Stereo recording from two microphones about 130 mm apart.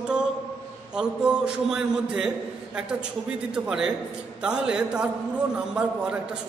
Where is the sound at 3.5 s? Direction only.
5° right (ahead or behind).